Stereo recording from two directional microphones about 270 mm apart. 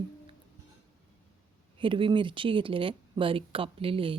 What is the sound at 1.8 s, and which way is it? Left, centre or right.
Speech, centre.